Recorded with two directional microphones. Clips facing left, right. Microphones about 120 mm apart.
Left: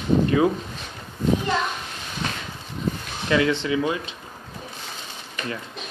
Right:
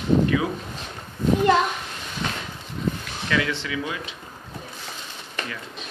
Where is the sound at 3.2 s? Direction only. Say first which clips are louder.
Left 5 dB; 30° left (ahead or behind).